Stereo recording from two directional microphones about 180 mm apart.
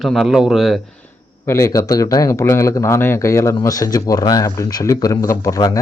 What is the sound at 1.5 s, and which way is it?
Speech, 15° left (ahead or behind).